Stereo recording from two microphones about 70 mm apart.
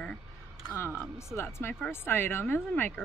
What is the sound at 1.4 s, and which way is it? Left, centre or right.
Speech, left.